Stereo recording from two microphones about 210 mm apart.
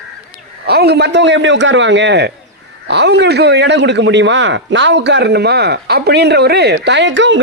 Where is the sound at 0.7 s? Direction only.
50° right (ahead or behind).